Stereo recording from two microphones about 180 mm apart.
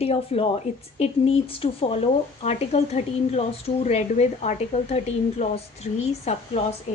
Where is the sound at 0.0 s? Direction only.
35° left (ahead or behind).